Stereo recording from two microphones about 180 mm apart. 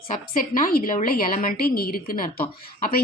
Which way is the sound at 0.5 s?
55° left (ahead or behind).